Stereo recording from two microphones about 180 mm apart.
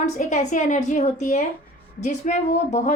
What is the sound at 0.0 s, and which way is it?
A woman's voice, 40° left (ahead or behind).